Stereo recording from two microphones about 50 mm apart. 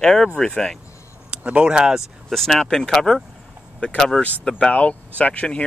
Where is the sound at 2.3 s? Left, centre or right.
Centre.